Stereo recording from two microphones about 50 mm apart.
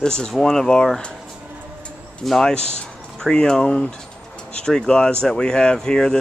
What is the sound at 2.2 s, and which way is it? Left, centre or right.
Speech, centre.